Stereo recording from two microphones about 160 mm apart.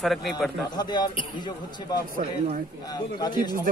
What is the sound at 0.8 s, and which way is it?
Speech, 25° left (ahead or behind).